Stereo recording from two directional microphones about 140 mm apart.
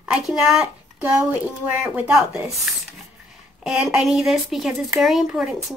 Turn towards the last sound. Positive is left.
turn(degrees=0)  # may be behind; listen again after turning